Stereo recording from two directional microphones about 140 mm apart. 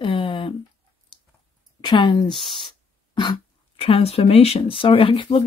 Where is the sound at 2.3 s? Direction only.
Centre (ahead or behind).